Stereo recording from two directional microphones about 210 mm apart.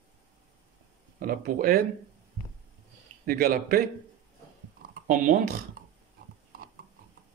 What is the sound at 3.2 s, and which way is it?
Speech, 45° right (ahead or behind).